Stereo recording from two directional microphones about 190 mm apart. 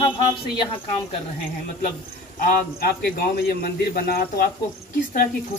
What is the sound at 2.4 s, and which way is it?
A man's voice, 50° left (ahead or behind).